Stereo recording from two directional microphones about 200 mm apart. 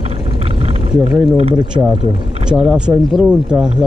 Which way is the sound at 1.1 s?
Centre (ahead or behind).